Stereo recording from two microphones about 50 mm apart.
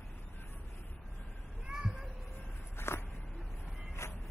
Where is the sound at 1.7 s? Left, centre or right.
Centre.